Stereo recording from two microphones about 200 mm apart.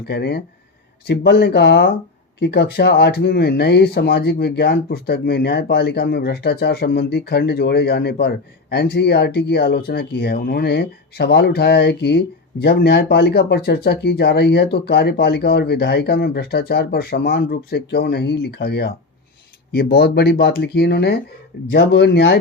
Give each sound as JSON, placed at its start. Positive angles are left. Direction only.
{"t": 0.0, "sound": "speech", "side_deg": 55}